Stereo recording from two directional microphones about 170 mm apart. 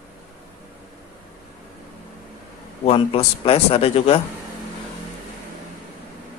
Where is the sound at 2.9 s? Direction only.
35° left (ahead or behind).